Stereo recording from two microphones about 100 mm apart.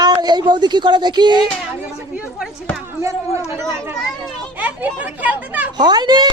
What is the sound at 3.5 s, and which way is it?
Speech, 30° right (ahead or behind).